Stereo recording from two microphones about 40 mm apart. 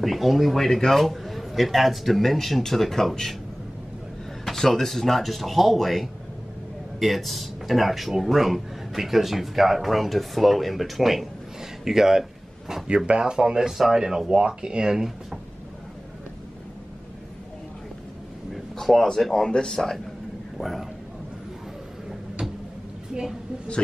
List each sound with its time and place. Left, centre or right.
0.0 s speech: centre
4.5 s speech: centre
12.8 s speech: right
13.7 s speech: centre
18.5 s a sound: centre
19.3 s speech: centre
20.5 s a man's voice: centre